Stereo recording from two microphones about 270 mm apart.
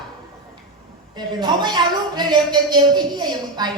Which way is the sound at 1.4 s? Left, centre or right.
Centre.